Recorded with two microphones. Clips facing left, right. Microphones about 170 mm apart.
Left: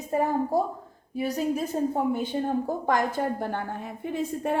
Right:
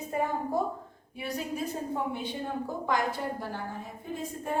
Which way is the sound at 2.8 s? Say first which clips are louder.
Left 2 dB; 50° left (ahead or behind).